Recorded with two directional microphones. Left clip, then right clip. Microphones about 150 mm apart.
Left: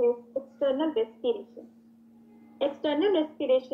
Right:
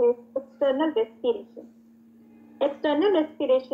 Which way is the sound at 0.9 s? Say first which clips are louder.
Right 3 dB; 35° left (ahead or behind).